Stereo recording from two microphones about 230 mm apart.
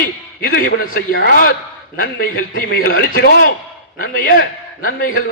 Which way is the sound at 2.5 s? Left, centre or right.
Left.